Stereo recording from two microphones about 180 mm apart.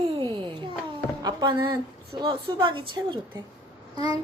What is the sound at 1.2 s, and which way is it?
A child's voice, 25° right (ahead or behind).